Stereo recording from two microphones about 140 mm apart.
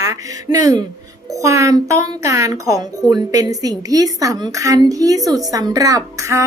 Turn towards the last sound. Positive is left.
turn(degrees=-20)  # may be behind; listen again after turning